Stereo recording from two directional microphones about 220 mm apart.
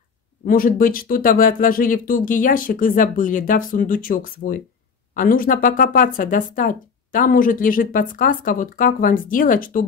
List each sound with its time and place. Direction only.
0.5 s speech: 40° left (ahead or behind)